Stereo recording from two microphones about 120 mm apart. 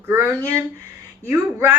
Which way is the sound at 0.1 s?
20° right (ahead or behind).